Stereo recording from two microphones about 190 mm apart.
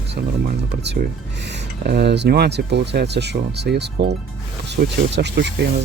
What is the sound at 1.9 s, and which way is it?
Speech, 60° right (ahead or behind).